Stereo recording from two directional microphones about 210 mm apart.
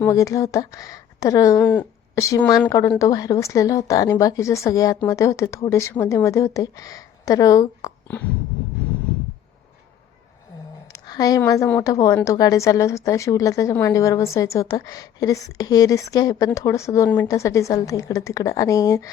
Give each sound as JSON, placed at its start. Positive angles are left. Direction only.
{"t": 0.0, "sound": "a woman's voice", "side_deg": 15}
{"t": 10.9, "sound": "a woman's voice", "side_deg": 20}